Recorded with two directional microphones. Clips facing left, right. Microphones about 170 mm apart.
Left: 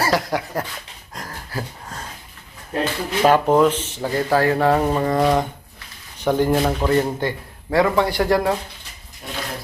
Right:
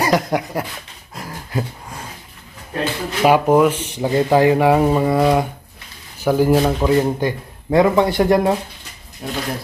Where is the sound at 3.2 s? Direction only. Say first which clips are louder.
Right 2 dB; 10° right (ahead or behind).